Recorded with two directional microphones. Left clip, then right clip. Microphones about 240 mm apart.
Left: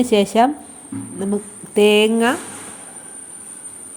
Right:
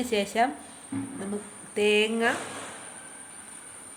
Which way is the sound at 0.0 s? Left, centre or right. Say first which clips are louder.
Left 11 dB; left.